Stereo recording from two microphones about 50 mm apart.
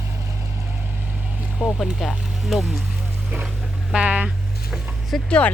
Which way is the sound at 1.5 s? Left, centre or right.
Centre.